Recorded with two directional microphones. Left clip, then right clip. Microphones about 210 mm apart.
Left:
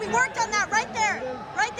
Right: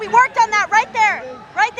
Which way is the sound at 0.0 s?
10° left (ahead or behind).